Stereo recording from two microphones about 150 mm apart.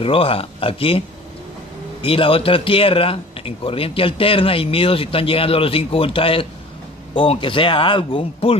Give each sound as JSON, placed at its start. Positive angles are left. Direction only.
{"t": 0.0, "sound": "speech", "side_deg": 40}
{"t": 2.0, "sound": "speech", "side_deg": 35}